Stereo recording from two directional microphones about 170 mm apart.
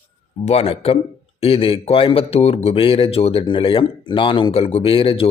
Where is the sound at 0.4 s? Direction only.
35° left (ahead or behind).